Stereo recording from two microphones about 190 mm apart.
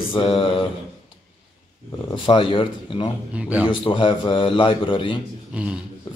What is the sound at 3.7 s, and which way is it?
Speech, 25° left (ahead or behind).